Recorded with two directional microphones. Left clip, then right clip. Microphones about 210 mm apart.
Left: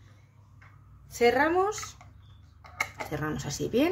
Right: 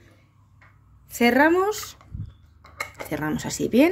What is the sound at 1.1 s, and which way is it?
Speech, 50° right (ahead or behind).